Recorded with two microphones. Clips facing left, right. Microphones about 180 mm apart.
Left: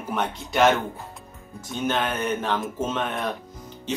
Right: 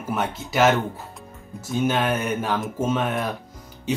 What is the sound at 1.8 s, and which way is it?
Speech, 10° right (ahead or behind).